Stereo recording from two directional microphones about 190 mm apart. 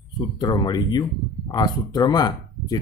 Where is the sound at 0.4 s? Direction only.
20° left (ahead or behind).